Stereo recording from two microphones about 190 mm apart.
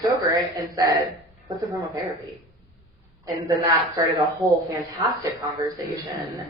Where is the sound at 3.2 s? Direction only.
20° right (ahead or behind).